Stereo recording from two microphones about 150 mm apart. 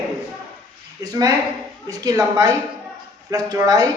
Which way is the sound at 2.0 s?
25° right (ahead or behind).